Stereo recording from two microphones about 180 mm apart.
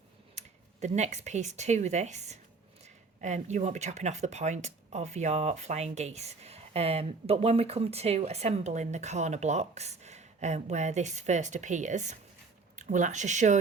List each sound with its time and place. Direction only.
0.3 s speech: 40° right (ahead or behind)